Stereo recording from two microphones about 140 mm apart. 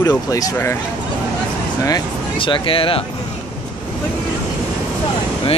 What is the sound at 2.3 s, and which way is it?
Speech, 40° left (ahead or behind).